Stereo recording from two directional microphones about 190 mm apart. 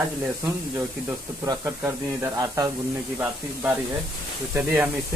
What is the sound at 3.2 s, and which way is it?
Speech, 5° right (ahead or behind).